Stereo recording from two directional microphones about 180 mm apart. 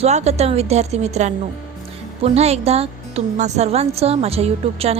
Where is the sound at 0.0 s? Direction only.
40° right (ahead or behind).